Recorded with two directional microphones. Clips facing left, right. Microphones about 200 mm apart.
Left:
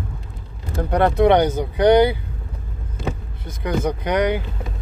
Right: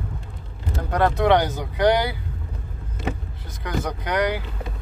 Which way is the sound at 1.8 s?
20° left (ahead or behind).